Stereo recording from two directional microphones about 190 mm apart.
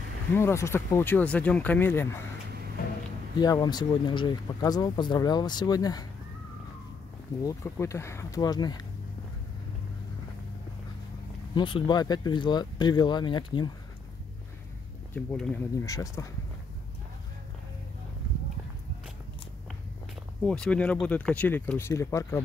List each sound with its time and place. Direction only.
0.3 s speech: 15° left (ahead or behind)
3.3 s speech: 20° left (ahead or behind)
7.4 s speech: 15° left (ahead or behind)
11.5 s speech: 25° left (ahead or behind)
15.1 s speech: 5° left (ahead or behind)
15.8 s speech: 15° left (ahead or behind)
20.4 s speech: 5° left (ahead or behind)